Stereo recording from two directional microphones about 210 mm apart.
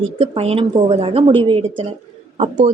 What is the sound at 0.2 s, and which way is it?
A woman's voice, 30° right (ahead or behind).